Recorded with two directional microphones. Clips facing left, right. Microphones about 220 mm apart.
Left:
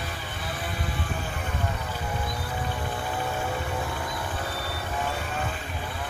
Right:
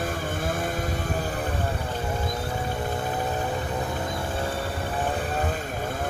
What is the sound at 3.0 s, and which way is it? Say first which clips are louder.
Music: right 3 dB; 45° right (ahead or behind).